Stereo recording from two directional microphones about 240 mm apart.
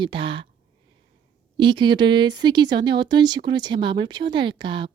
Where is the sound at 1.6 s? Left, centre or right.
Centre.